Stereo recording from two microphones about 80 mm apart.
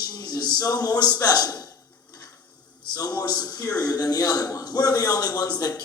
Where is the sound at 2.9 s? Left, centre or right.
Left.